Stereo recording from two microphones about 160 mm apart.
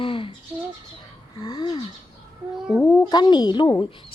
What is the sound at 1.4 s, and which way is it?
Speech, 25° left (ahead or behind).